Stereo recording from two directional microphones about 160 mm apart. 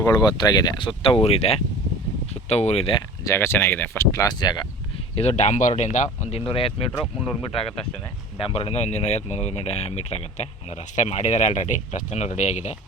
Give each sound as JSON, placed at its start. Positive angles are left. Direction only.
{"t": 0.0, "sound": "speech", "side_deg": 25}
{"t": 3.2, "sound": "speech", "side_deg": 15}
{"t": 5.1, "sound": "speech", "side_deg": 40}
{"t": 8.4, "sound": "speech", "side_deg": 35}